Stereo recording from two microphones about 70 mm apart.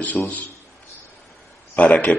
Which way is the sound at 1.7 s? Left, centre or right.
Centre.